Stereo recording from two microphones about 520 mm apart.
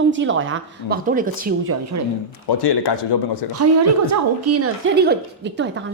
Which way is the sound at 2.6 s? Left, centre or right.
Left.